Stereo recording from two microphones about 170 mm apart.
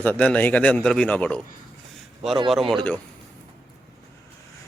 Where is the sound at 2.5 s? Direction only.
Centre (ahead or behind).